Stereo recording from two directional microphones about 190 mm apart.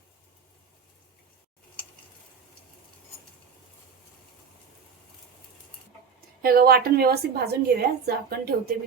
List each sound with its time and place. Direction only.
6.4 s a woman's voice: 50° right (ahead or behind)